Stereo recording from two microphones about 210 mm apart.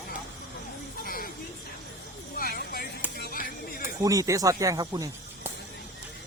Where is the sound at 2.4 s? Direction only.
45° left (ahead or behind).